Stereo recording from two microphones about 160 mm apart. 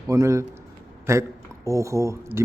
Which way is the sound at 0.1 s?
20° right (ahead or behind).